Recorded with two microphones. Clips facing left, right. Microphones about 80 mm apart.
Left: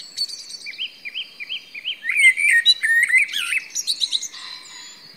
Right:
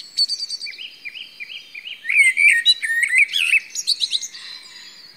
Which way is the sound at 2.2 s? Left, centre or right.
Left.